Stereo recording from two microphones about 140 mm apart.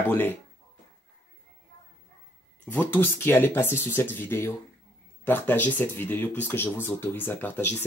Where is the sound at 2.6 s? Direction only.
10° left (ahead or behind).